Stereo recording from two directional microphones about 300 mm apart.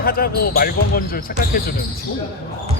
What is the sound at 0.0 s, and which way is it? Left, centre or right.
Speech, left.